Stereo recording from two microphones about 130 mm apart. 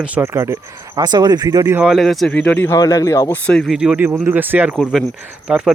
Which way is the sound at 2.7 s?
25° left (ahead or behind).